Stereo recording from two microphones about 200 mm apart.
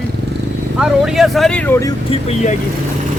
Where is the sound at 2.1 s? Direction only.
30° left (ahead or behind).